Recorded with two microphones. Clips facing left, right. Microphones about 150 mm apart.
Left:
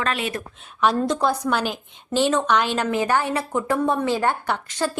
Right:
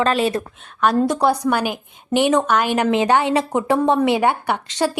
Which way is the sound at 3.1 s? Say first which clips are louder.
Right 5 dB; 75° right (ahead or behind).